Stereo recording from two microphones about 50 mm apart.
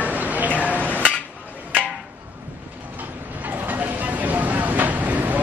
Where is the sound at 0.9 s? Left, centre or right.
Left.